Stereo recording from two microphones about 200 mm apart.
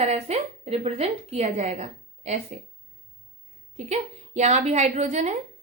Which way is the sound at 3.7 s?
35° right (ahead or behind).